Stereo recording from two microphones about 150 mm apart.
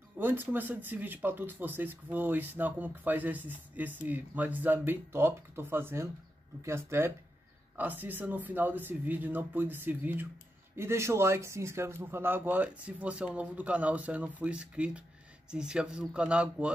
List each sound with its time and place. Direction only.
0.2 s speech: 15° right (ahead or behind)